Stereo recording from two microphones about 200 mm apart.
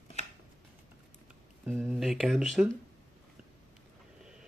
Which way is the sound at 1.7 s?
10° right (ahead or behind).